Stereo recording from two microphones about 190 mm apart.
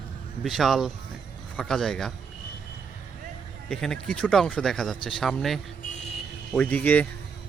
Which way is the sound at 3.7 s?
5° left (ahead or behind).